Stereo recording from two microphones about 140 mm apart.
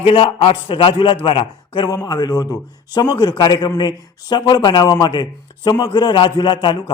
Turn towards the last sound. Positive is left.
turn(degrees=35)  # may be behind; listen again after turning